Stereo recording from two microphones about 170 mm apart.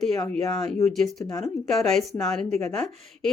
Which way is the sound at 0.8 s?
Centre (ahead or behind).